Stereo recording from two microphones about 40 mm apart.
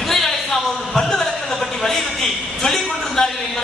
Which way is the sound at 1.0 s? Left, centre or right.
Centre.